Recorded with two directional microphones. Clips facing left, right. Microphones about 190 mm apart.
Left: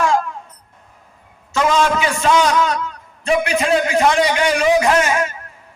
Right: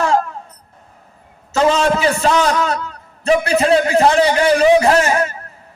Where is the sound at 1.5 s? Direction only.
35° right (ahead or behind).